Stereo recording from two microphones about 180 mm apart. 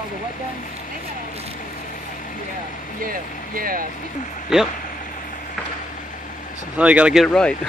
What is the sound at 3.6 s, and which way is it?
Speech, 50° right (ahead or behind).